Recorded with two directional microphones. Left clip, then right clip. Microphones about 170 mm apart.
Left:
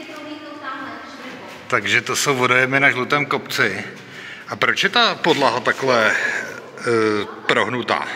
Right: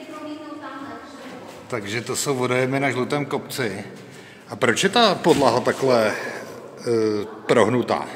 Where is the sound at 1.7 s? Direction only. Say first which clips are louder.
Left 9 dB; 5° right (ahead or behind).